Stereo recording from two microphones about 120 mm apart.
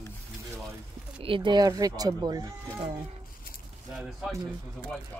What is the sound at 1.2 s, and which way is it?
Speech, 45° right (ahead or behind).